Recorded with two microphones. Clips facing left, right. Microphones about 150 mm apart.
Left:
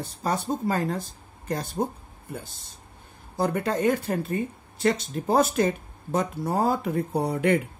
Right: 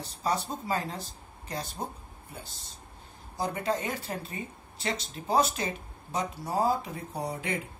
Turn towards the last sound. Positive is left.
turn(degrees=60)  # may be behind; listen again after turning